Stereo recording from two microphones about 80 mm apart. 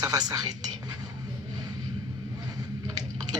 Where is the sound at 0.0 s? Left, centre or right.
Right.